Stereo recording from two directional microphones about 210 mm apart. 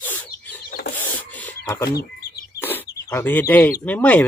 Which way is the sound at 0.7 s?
45° left (ahead or behind).